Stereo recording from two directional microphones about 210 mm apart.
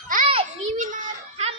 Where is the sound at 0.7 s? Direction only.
40° right (ahead or behind).